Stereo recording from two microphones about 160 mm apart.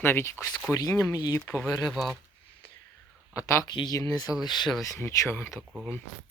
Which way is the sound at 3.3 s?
20° left (ahead or behind).